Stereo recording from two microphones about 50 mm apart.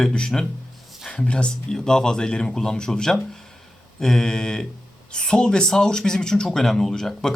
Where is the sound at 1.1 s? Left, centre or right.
Left.